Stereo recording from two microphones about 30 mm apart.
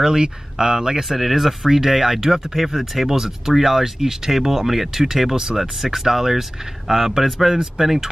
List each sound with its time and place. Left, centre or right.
0.0 s speech: right
1.0 s speech: centre
7.2 s speech: centre